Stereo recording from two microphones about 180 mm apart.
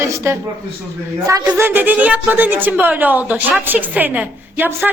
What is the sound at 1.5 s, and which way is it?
Speech, 10° right (ahead or behind).